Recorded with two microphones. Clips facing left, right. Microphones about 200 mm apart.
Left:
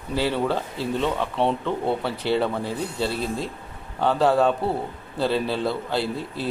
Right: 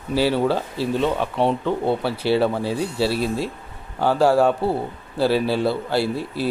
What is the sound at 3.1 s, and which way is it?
Speech, 70° right (ahead or behind).